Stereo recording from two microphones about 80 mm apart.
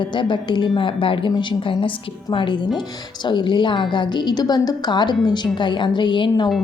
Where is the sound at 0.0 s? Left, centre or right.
Left.